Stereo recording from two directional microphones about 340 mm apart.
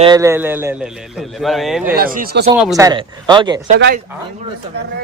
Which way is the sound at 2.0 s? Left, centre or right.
Right.